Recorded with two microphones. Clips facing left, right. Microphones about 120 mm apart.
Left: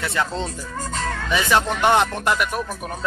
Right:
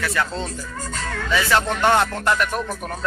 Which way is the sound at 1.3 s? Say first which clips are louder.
Even; 20° left (ahead or behind).